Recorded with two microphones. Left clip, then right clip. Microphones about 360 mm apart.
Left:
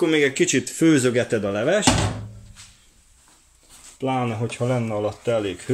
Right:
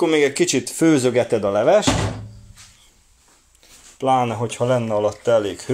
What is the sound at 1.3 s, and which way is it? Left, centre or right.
Speech, right.